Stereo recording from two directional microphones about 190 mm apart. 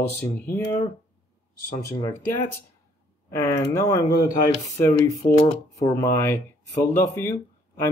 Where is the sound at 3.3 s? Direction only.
15° left (ahead or behind).